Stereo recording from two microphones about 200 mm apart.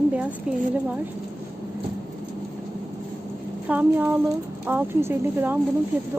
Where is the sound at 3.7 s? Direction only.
10° right (ahead or behind).